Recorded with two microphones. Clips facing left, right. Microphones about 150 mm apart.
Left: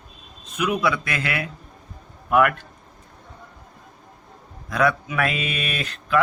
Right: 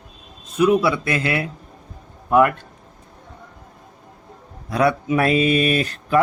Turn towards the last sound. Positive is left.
turn(degrees=-40)  # may be behind; listen again after turning